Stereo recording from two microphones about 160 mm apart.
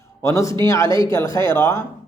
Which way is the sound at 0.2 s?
20° left (ahead or behind).